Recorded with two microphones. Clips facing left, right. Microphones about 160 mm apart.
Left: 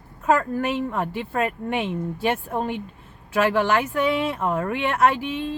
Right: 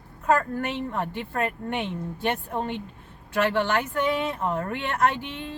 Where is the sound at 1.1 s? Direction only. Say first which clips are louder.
Left 3 dB; 90° left.